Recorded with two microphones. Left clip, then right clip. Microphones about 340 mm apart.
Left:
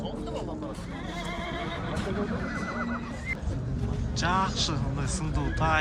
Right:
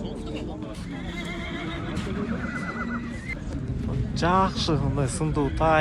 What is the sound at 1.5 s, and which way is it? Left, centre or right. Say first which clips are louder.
Neigh: even; left.